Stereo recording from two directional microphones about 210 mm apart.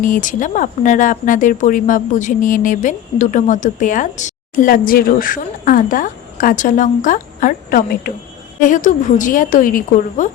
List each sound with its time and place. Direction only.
0.0 s speech: 40° left (ahead or behind)